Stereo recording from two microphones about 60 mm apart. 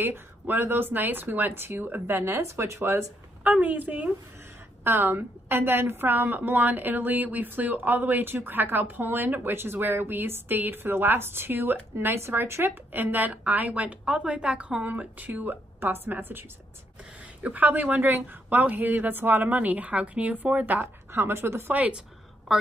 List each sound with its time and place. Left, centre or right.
0.0 s a woman's voice: right
3.4 s speech: right
4.8 s a woman's voice: right
21.1 s a woman's voice: right
21.7 s speech: right